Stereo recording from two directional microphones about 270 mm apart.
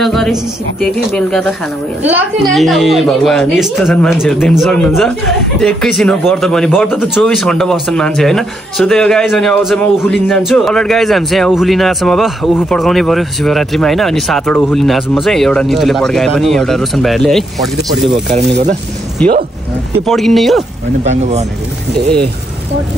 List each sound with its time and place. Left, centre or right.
0.0 s speech: centre
19.2 s speech: centre
21.0 s speech: right